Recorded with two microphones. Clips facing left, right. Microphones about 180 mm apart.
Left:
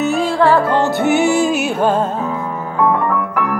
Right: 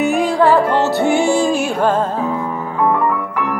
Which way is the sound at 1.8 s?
10° left (ahead or behind).